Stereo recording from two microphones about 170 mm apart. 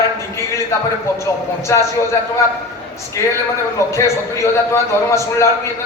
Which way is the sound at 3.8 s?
15° left (ahead or behind).